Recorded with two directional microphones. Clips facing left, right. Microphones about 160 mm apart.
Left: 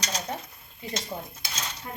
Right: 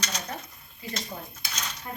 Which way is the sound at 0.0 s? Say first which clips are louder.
Left 3 dB; 30° left (ahead or behind).